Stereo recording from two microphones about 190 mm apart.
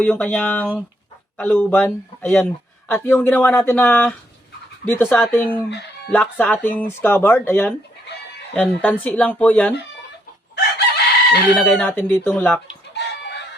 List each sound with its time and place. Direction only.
0.0 s speech: 5° left (ahead or behind)
10.5 s chicken: 60° left (ahead or behind)
11.5 s speech: 5° left (ahead or behind)
12.9 s chicken: 65° left (ahead or behind)